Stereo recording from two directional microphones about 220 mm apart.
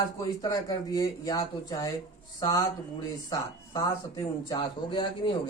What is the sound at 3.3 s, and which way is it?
A man's voice, 15° left (ahead or behind).